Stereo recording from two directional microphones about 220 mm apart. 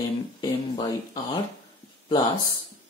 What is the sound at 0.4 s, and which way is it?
Speech, 15° left (ahead or behind).